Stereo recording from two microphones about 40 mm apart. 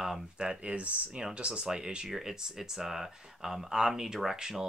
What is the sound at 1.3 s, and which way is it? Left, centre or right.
Speech, right.